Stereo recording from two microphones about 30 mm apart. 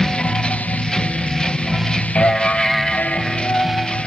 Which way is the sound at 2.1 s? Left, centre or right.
Left.